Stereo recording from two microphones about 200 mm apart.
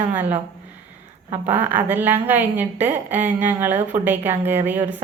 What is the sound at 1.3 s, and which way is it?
A woman's voice, 10° right (ahead or behind).